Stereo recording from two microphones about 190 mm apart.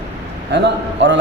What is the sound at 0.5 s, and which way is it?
Speech, 70° right (ahead or behind).